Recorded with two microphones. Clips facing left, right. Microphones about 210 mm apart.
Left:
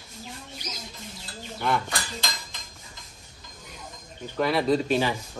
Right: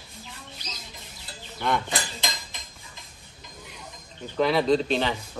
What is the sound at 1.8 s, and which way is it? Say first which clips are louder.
Cutlery: right 2 dB; 20° right (ahead or behind).